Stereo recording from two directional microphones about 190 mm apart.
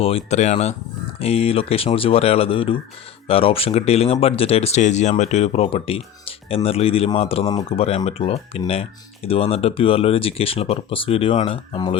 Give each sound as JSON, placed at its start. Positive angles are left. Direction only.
{"t": 0.0, "sound": "speech", "side_deg": 30}